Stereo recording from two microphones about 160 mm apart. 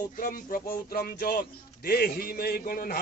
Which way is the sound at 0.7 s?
70° left (ahead or behind).